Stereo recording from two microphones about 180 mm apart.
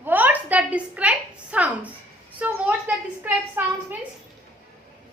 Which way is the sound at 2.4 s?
10° right (ahead or behind).